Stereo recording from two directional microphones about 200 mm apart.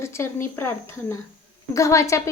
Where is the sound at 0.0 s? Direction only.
15° left (ahead or behind).